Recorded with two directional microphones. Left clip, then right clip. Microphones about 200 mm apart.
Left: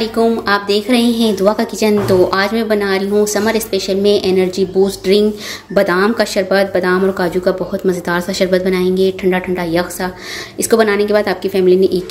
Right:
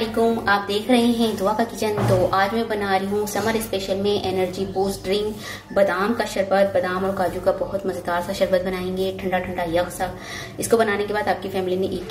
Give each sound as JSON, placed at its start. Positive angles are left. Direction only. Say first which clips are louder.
{"t": 0.0, "sound": "a woman's voice", "louder": "left 6 dB", "side_deg": 50}